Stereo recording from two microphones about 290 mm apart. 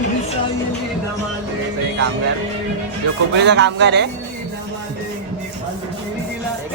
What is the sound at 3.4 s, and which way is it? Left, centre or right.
Speech, right.